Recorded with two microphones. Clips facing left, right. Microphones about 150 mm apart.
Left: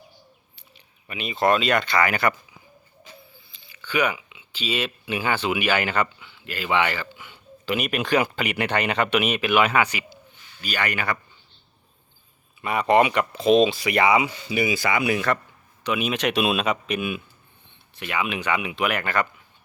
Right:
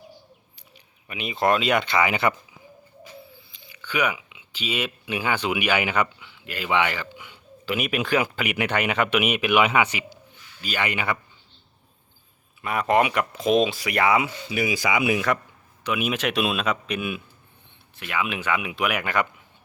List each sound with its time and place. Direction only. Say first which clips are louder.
1.0 s speech: left 1 dB; 15° right (ahead or behind)
3.8 s speech: left 2 dB; 10° right (ahead or behind)
7.2 s a sound: even; centre (ahead or behind)
8.1 s speech: left 3 dB; 5° right (ahead or behind)
12.6 s speech: left 2 dB; centre (ahead or behind)
13.8 s speech: left 2 dB; 5° left (ahead or behind)
14.9 s speech: right 2 dB; 15° right (ahead or behind)